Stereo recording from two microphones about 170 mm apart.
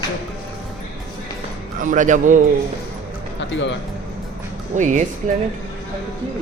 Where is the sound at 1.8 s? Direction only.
50° right (ahead or behind).